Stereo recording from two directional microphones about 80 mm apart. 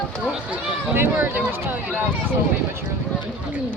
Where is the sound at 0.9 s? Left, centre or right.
Right.